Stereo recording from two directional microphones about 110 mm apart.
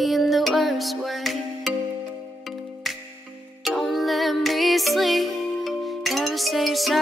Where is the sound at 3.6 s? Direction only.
Centre (ahead or behind).